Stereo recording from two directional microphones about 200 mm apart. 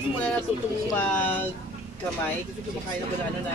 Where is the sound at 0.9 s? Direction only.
10° left (ahead or behind).